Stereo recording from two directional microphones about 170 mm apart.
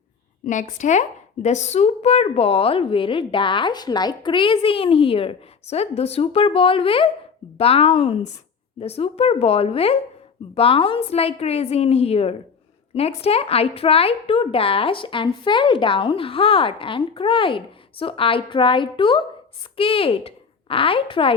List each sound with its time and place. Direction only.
0.4 s speech: 45° left (ahead or behind); by 21.3 s 30° left (ahead or behind)